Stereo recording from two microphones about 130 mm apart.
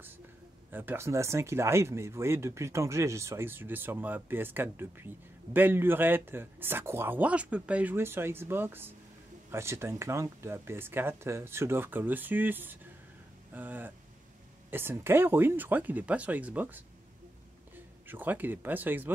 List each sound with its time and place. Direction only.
0.7 s speech: 15° right (ahead or behind)
18.0 s speech: 15° right (ahead or behind)